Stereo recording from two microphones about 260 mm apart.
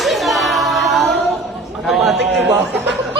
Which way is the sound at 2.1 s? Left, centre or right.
Right.